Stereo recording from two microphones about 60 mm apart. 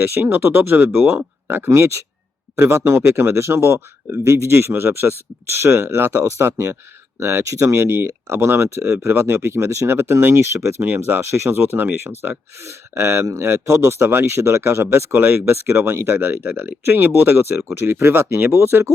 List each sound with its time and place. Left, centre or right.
0.1 s speech: right
4.2 s speech: right
4.5 s speech: right
10.8 s speech: right
16.3 s speech: right